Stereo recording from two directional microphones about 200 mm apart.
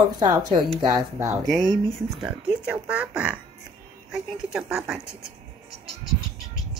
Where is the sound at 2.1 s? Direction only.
5° right (ahead or behind).